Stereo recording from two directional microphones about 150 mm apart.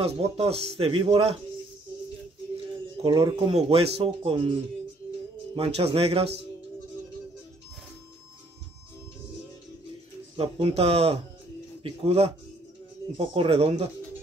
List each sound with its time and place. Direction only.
0.0 s speech: 40° right (ahead or behind)
3.1 s speech: 25° right (ahead or behind)
5.6 s speech: 40° right (ahead or behind)
10.3 s speech: 40° right (ahead or behind)